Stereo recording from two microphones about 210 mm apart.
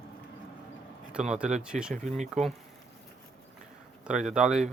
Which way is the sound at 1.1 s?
5° right (ahead or behind).